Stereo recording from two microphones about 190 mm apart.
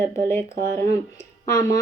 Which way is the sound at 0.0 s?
15° left (ahead or behind).